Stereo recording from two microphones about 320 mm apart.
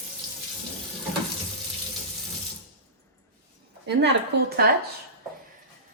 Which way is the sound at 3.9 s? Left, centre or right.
Right.